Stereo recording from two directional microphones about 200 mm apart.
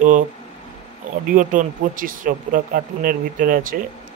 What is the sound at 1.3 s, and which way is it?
Speech, 40° right (ahead or behind).